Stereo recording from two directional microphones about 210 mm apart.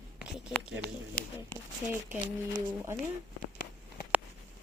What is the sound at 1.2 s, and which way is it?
Speech, 45° left (ahead or behind).